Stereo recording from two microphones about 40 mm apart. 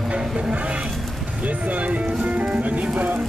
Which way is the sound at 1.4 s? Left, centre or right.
Right.